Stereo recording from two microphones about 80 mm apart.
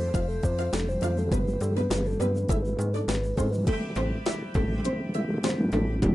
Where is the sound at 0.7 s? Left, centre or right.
Centre.